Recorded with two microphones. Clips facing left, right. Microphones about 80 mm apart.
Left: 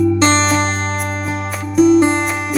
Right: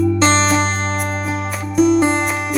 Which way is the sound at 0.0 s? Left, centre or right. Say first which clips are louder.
Left 1 dB; centre.